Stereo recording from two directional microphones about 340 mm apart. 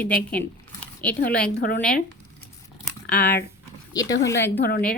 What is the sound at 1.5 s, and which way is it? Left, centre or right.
Speech, left.